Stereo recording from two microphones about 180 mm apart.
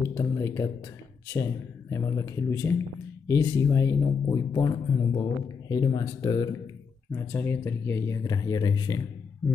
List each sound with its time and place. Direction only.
0.2 s speech: 15° left (ahead or behind)